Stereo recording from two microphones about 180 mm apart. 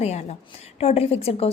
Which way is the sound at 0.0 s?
35° left (ahead or behind).